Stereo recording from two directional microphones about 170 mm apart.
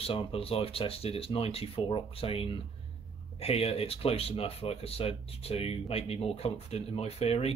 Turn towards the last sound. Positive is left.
turn(degrees=35)  # may be behind; listen again after turning